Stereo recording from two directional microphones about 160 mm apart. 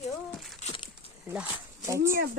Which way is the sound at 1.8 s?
20° right (ahead or behind).